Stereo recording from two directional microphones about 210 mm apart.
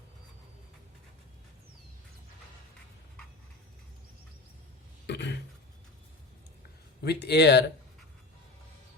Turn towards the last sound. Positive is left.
turn(degrees=55)  # may be behind; listen again after turning